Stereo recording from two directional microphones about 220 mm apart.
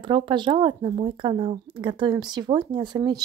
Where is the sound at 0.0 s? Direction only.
20° right (ahead or behind).